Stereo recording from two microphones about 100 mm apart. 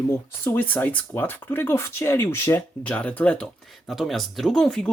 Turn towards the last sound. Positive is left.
turn(degrees=5)  # may be behind; listen again after turning